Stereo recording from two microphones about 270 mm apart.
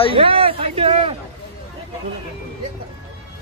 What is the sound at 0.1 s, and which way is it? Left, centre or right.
Speech, centre.